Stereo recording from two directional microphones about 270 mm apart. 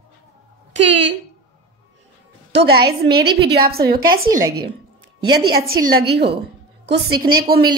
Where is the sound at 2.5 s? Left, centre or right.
Right.